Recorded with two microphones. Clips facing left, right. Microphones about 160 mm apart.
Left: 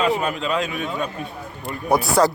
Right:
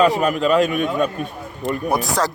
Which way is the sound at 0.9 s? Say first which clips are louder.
Right 6 dB; 70° right (ahead or behind).